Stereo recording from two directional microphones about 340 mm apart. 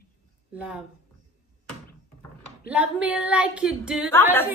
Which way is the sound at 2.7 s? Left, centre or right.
Centre.